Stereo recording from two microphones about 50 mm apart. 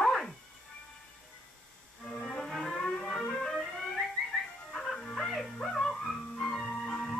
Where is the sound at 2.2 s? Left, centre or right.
Centre.